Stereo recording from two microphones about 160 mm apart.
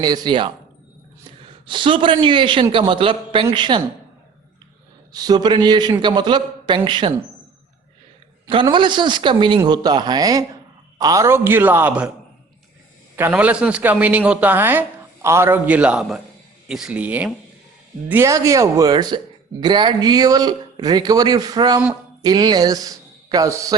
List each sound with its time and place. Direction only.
0.0 s a man's voice: 25° right (ahead or behind)
1.6 s a man's voice: 30° right (ahead or behind)
5.1 s a man's voice: 25° right (ahead or behind)
8.6 s a man's voice: 30° right (ahead or behind); by 12.1 s 10° right (ahead or behind)
13.1 s a man's voice: 10° right (ahead or behind)